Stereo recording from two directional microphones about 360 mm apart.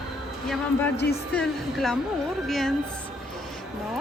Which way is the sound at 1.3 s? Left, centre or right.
Centre.